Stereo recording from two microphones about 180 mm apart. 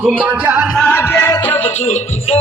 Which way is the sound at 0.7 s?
10° left (ahead or behind).